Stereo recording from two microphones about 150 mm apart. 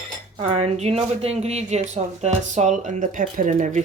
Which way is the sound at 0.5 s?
45° right (ahead or behind).